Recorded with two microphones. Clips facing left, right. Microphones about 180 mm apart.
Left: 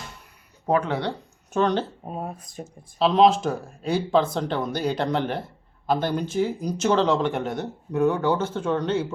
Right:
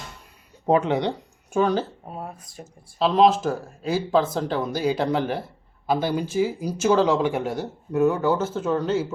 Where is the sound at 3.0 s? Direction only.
Centre (ahead or behind).